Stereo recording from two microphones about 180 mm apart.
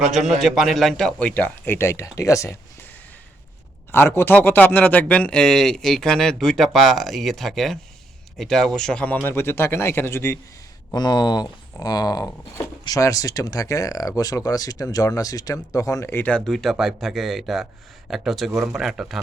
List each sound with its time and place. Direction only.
0.0 s speech: centre (ahead or behind); by 2.6 s 15° left (ahead or behind)
3.9 s speech: 15° left (ahead or behind)